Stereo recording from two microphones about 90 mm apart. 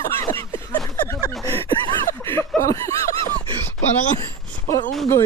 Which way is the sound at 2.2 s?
35° left (ahead or behind).